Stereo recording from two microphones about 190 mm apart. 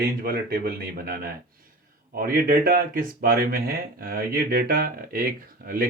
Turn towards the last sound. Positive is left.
turn(degrees=-50)  # may be behind; listen again after turning